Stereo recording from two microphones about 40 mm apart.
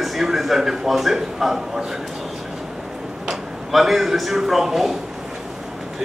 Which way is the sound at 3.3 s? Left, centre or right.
Centre.